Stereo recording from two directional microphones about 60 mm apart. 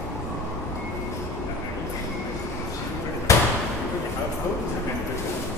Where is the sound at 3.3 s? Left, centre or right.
Left.